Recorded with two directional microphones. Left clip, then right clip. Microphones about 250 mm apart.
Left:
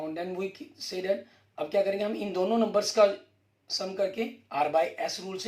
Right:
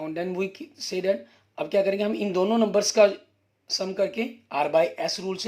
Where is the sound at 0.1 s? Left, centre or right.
Right.